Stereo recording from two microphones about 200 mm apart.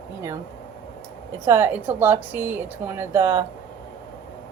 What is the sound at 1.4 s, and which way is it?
A woman's voice, 10° right (ahead or behind).